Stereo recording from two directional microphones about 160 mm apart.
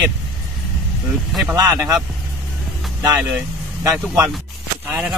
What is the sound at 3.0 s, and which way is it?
Speech, 10° right (ahead or behind).